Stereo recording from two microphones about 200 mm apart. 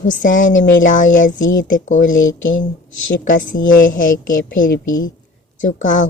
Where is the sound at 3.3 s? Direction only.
40° left (ahead or behind).